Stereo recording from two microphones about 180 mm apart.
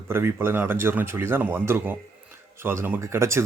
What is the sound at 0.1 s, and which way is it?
Speech, 15° right (ahead or behind).